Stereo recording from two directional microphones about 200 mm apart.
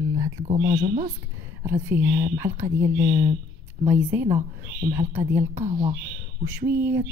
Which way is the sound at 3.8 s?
10° right (ahead or behind).